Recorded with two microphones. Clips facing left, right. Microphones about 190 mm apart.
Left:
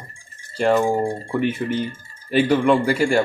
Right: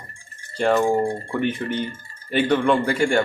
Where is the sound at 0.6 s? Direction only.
5° left (ahead or behind).